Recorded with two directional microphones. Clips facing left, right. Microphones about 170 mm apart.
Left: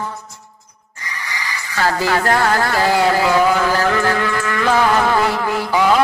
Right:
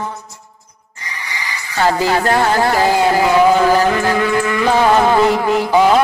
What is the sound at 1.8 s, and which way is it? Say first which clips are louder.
Music: right 3 dB; 20° right (ahead or behind).